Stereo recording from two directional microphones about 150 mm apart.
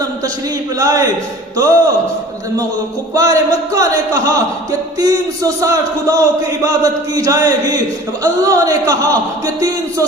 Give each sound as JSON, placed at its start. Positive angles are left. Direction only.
{"t": 0.8, "sound": "a man's voice", "side_deg": -25}
{"t": 3.2, "sound": "a man's voice", "side_deg": -25}